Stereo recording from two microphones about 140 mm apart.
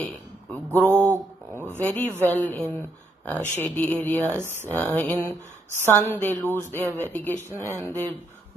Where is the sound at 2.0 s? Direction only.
15° right (ahead or behind).